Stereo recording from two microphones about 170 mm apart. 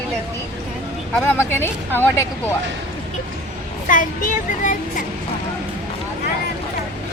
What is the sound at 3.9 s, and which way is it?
Speech, 50° left (ahead or behind).